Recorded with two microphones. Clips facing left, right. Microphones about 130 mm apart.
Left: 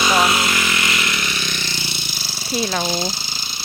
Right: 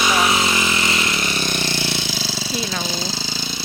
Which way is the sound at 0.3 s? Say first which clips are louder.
Right 1 dB; 20° right (ahead or behind).